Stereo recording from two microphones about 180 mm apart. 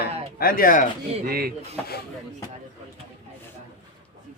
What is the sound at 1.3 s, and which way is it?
Speech, 55° right (ahead or behind).